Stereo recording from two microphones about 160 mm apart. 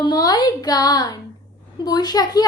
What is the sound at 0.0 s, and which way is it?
A child's voice, 25° left (ahead or behind).